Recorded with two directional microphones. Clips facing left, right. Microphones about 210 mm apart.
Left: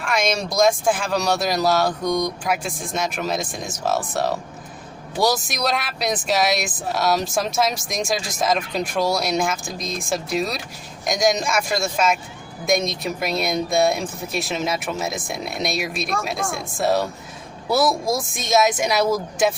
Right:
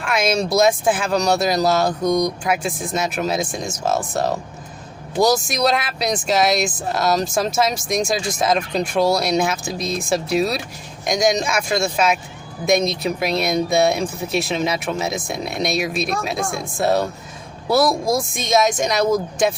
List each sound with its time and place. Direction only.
0.0 s speech: 5° right (ahead or behind)
2.0 s speech: 20° right (ahead or behind)
2.4 s speech: centre (ahead or behind)